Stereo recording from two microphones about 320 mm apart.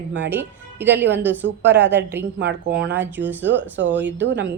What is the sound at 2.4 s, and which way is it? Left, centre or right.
Speech, right.